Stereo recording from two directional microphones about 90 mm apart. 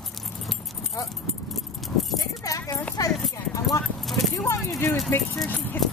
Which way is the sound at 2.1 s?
40° left (ahead or behind).